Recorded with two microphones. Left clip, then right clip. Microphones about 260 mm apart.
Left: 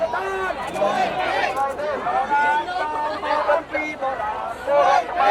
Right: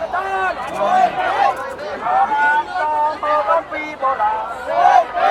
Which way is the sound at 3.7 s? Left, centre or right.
Centre.